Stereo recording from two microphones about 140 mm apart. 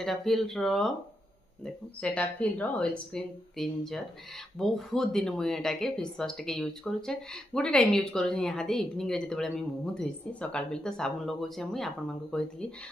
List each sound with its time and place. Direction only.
0.0 s speech: centre (ahead or behind)